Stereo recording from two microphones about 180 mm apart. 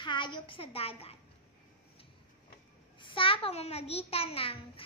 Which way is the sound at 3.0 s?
30° left (ahead or behind).